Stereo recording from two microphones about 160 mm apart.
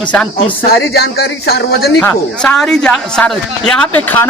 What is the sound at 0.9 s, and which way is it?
Speech, 80° left.